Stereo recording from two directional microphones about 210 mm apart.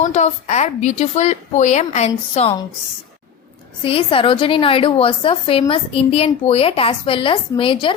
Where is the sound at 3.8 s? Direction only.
25° left (ahead or behind).